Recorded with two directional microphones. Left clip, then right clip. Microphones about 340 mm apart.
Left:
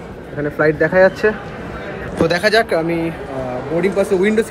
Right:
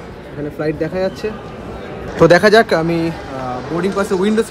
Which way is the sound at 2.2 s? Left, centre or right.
Right.